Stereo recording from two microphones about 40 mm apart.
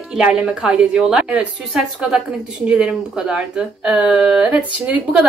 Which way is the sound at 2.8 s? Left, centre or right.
Right.